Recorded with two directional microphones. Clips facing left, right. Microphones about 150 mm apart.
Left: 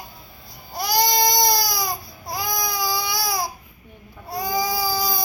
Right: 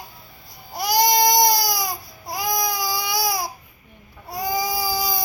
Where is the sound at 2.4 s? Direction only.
40° right (ahead or behind).